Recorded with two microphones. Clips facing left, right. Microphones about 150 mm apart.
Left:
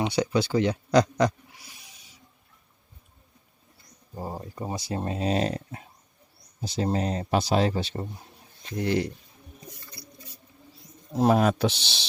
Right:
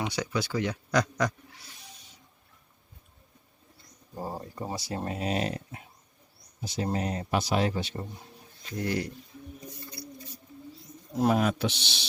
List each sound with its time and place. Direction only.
0.0 s speech: 25° left (ahead or behind)
4.1 s speech: 10° left (ahead or behind); by 9.0 s 25° left (ahead or behind)
11.1 s speech: 35° left (ahead or behind)